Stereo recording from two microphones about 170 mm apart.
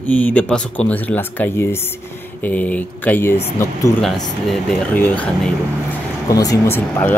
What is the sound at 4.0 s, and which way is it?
Speech, centre (ahead or behind).